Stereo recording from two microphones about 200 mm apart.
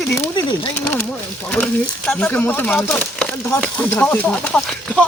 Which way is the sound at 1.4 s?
5° left (ahead or behind).